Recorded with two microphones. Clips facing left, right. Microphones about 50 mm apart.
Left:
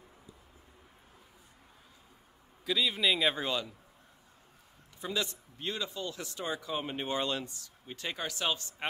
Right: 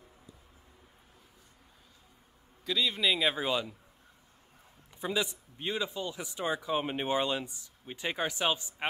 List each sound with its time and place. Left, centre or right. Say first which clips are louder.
2.6 s a man's voice: even; centre
5.0 s a man's voice: right 3 dB; centre